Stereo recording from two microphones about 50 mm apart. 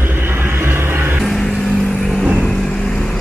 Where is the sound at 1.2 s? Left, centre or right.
Centre.